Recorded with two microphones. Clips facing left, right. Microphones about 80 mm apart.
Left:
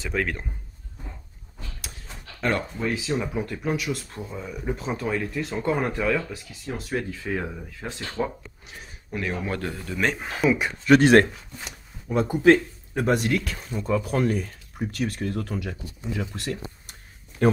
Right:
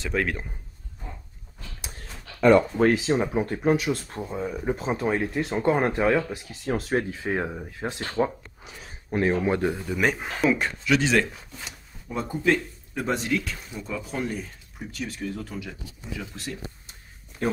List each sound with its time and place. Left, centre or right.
0.0 s a man's voice: centre
3.0 s speech: right
4.2 s speech: right
6.6 s speech: right
6.9 s speech: right; by 10.7 s centre
10.9 s speech: left
12.1 s speech: left
12.9 s speech: left
13.7 s a man's voice: centre
14.0 s speech: left
16.3 s speech: left